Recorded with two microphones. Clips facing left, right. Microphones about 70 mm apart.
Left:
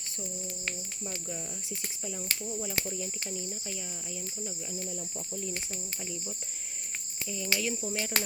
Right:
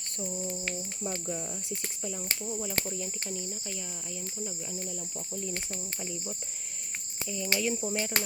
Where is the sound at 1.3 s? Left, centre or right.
Centre.